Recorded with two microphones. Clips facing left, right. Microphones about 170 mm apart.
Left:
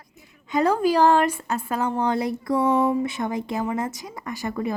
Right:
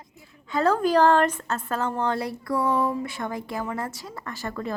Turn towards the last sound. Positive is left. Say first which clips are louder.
# left 4 dB
turn(degrees=15)  # may be behind; listen again after turning